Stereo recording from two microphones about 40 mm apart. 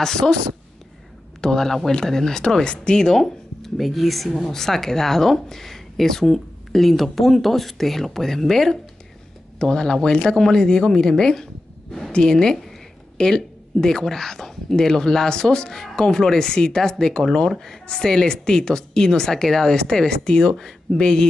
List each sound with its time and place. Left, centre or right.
0.0 s speech: centre
1.4 s speech: centre
3.0 s speech: centre
9.6 s a woman's voice: centre